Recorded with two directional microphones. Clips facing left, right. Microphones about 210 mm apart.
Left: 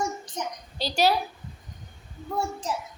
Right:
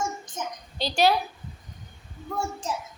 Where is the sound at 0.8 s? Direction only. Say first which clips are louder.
Right 1 dB; 10° left (ahead or behind).